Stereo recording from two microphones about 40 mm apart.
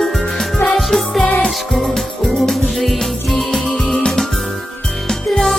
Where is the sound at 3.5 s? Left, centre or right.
Centre.